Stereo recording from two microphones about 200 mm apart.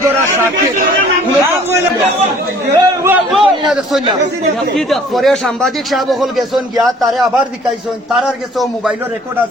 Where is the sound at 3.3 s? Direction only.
Centre (ahead or behind).